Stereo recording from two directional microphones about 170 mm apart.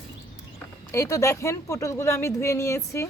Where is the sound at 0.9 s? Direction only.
15° left (ahead or behind).